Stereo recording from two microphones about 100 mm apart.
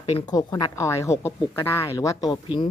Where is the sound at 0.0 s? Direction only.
85° left.